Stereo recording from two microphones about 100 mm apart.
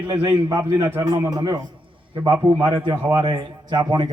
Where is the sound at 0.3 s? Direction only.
40° right (ahead or behind).